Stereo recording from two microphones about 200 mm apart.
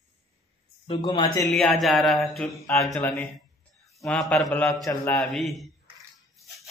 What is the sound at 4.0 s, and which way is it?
Mantra, 5° left (ahead or behind).